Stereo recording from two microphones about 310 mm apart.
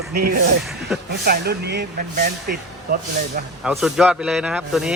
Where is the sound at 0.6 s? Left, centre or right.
Centre.